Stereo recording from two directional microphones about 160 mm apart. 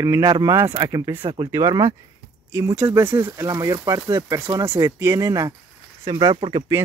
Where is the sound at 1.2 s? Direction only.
35° right (ahead or behind).